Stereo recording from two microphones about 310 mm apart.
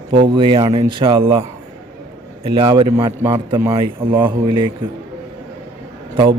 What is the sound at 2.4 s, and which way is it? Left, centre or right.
A man's voice, centre.